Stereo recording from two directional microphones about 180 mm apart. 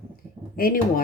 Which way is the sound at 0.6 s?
55° left (ahead or behind).